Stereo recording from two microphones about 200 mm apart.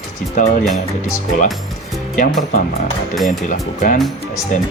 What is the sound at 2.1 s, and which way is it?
Speech, 40° left (ahead or behind).